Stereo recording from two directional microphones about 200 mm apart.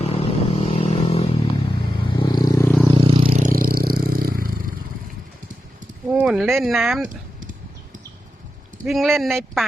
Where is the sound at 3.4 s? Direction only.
45° right (ahead or behind).